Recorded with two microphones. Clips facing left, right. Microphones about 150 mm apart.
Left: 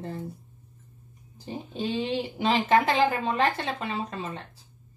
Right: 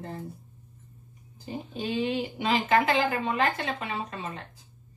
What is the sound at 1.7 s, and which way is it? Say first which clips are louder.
Speech: even; 30° left (ahead or behind).